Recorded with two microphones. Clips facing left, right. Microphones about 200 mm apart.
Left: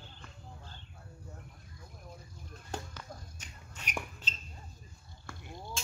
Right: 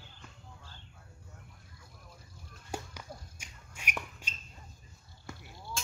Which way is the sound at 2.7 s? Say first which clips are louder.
Right 1 dB; 10° right (ahead or behind).